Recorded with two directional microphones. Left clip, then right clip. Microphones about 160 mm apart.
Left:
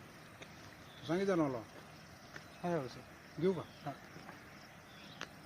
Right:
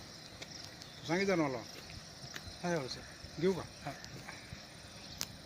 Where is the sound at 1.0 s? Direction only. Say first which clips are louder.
Right 2 dB; 70° left (ahead or behind).